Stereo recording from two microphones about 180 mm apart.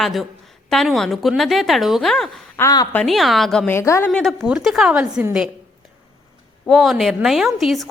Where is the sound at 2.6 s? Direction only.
20° left (ahead or behind).